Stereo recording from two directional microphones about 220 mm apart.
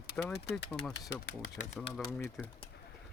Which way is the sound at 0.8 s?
50° left (ahead or behind).